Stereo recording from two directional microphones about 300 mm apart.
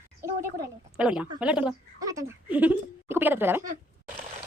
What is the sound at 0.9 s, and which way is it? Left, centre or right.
A woman's voice, centre.